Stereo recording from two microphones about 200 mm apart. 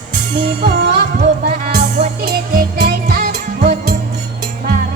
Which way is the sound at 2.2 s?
50° right (ahead or behind).